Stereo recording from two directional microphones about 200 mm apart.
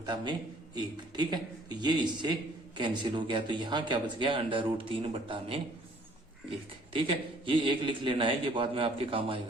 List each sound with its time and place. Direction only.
0.0 s a man's voice: 20° right (ahead or behind)
6.9 s speech: 25° right (ahead or behind)